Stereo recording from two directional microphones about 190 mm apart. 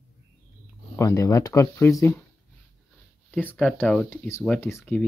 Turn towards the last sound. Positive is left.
turn(degrees=10)  # may be behind; listen again after turning